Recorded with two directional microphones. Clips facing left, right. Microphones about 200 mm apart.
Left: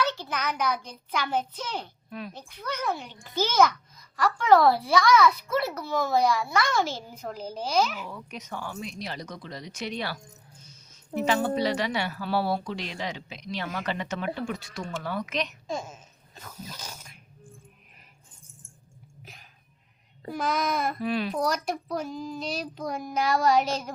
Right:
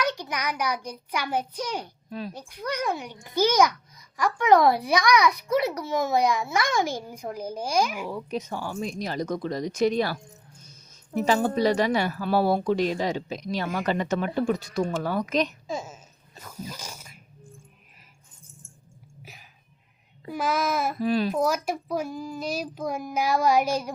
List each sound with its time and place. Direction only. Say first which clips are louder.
0.0 s a child's voice: right 1 dB; 15° right (ahead or behind)
2.0 s speech: right 3 dB; 35° right (ahead or behind)
2.3 s a child's voice: right 4 dB; 10° right (ahead or behind)
8.1 s speech: right 7 dB; 30° right (ahead or behind)
11.3 s speech: right 3 dB; 45° right (ahead or behind)
15.6 s speech: right 1 dB; 5° right (ahead or behind)
19.2 s a sound: right 2 dB; 5° right (ahead or behind)
20.3 s a child's voice: right 2 dB; 5° right (ahead or behind)
21.0 s speech: right 4 dB; 40° right (ahead or behind)
21.3 s a child's voice: right 3 dB; 5° right (ahead or behind)